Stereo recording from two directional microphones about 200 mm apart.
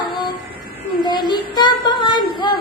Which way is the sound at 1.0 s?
20° left (ahead or behind).